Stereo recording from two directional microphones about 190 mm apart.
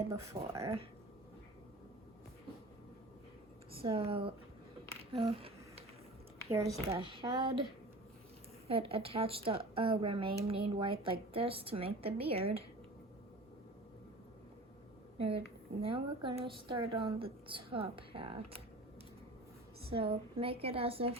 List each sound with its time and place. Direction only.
0.1 s speech: 15° right (ahead or behind)
0.6 s a woman's voice: 30° right (ahead or behind)
3.8 s a woman's voice: 30° right (ahead or behind)
5.1 s a sound: 30° right (ahead or behind)
6.5 s speech: 15° right (ahead or behind)
6.9 s a woman's voice: 30° right (ahead or behind)
8.6 s a woman's voice: 30° right (ahead or behind)
15.8 s a woman's voice: 30° right (ahead or behind)
19.8 s a woman's voice: 30° right (ahead or behind)